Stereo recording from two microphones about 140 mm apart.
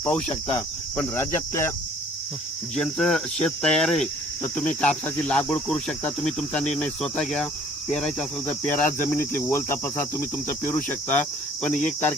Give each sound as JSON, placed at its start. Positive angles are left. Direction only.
{"t": 0.9, "sound": "cricket", "side_deg": 15}
{"t": 2.7, "sound": "cricket", "side_deg": 5}